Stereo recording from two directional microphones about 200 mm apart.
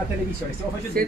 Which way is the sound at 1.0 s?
50° right (ahead or behind).